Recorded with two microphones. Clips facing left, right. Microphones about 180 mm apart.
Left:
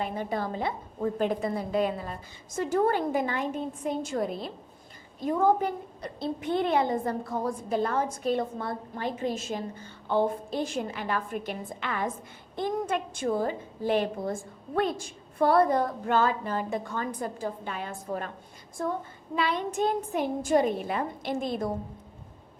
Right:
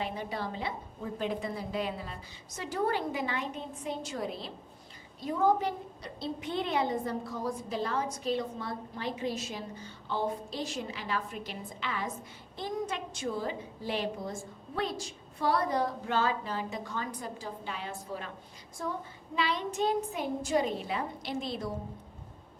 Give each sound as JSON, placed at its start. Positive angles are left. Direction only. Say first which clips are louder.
{"t": 0.0, "sound": "a woman's voice", "louder": "left 5 dB", "side_deg": 50}
{"t": 18.8, "sound": "child singing", "louder": "left 6 dB", "side_deg": 55}
{"t": 19.4, "sound": "a woman's voice", "louder": "left 3 dB", "side_deg": 50}